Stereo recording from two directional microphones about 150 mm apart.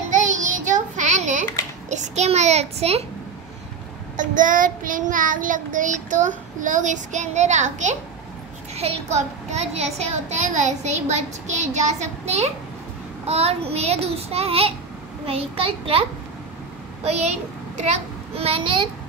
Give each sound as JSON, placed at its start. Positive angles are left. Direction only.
{"t": 0.1, "sound": "child singing", "side_deg": -60}
{"t": 1.9, "sound": "a child's voice", "side_deg": -50}
{"t": 4.2, "sound": "child singing", "side_deg": -60}
{"t": 8.7, "sound": "a child's voice", "side_deg": -45}